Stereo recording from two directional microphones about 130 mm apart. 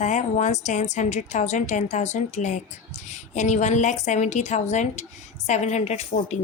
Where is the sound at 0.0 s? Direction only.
65° left (ahead or behind).